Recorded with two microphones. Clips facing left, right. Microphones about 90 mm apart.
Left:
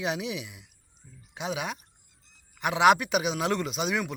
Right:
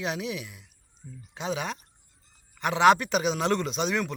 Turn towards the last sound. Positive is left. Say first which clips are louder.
# right 1 dB
turn(degrees=5)  # may be behind; listen again after turning